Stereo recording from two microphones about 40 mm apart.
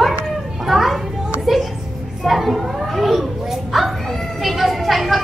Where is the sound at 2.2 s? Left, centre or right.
Centre.